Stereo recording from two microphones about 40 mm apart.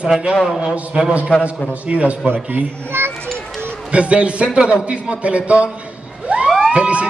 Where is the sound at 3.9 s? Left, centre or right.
Right.